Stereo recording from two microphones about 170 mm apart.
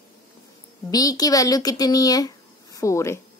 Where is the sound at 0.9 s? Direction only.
20° left (ahead or behind).